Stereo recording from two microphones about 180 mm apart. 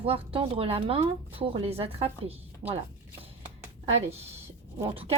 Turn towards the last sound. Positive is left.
turn(degrees=-30)  # may be behind; listen again after turning